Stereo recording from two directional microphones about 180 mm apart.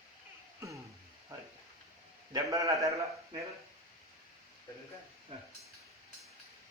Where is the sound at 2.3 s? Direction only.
15° right (ahead or behind).